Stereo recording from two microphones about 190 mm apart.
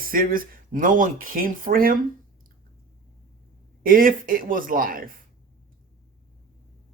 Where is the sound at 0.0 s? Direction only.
50° right (ahead or behind).